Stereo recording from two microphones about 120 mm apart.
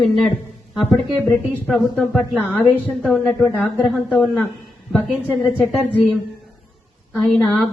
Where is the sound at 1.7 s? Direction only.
15° left (ahead or behind).